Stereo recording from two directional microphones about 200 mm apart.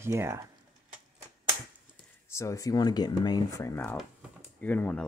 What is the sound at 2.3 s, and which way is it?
Speech, 15° left (ahead or behind).